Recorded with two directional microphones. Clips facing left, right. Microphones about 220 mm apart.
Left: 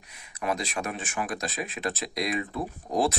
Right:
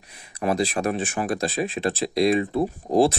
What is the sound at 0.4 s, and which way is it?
Speech, 35° right (ahead or behind).